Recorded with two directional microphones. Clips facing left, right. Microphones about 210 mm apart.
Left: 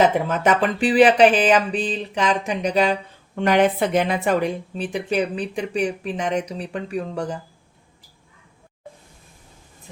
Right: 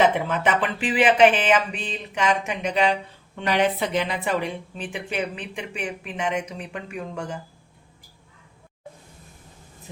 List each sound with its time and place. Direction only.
0.3 s a woman's voice: 40° left (ahead or behind)
3.3 s a woman's voice: 50° left (ahead or behind)